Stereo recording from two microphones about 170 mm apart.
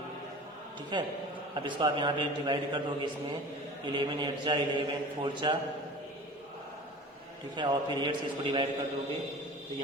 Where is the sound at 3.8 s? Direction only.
25° right (ahead or behind).